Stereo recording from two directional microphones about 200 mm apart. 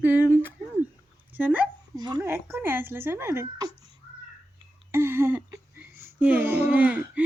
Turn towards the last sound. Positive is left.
turn(degrees=-5)  # may be behind; listen again after turning